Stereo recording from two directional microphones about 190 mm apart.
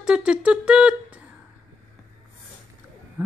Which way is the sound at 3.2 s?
10° right (ahead or behind).